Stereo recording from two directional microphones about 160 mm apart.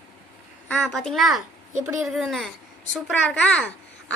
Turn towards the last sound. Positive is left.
turn(degrees=10)  # may be behind; listen again after turning